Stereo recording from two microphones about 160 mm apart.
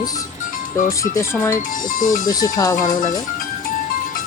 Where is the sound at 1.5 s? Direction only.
55° left (ahead or behind).